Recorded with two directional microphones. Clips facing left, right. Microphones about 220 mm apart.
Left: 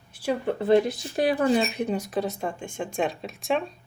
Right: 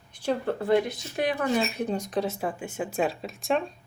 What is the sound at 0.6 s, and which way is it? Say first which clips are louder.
Speech: left 6 dB; 30° left (ahead or behind).